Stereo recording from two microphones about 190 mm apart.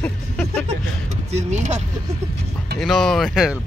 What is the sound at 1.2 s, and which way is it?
Speech, 35° right (ahead or behind).